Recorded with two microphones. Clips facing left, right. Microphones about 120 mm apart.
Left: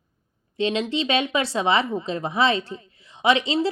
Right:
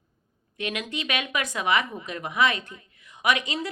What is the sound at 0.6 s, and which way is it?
A woman's voice, 25° left (ahead or behind).